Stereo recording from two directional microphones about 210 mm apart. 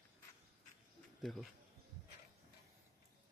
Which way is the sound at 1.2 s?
Centre (ahead or behind).